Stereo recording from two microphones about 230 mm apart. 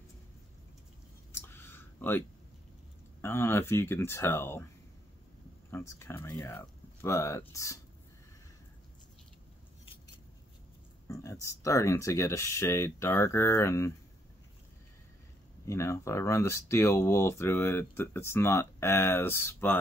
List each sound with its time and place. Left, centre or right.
1.3 s clicking: centre
3.2 s speech: centre
5.7 s speech: centre
11.1 s speech: centre
15.6 s speech: centre